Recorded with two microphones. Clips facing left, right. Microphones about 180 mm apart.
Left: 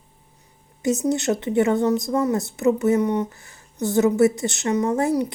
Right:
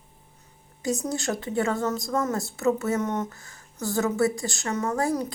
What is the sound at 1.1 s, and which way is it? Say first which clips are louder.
A woman's voice: left 7 dB; 20° left (ahead or behind).